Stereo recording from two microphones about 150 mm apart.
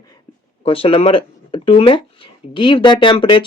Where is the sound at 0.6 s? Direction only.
40° left (ahead or behind).